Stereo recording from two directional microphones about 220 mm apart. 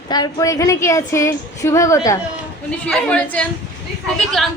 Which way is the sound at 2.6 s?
5° left (ahead or behind).